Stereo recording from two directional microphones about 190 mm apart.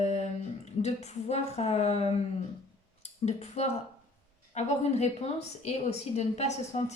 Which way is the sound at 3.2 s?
35° left (ahead or behind).